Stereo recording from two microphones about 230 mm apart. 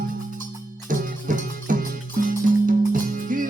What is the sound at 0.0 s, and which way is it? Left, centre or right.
Music, right.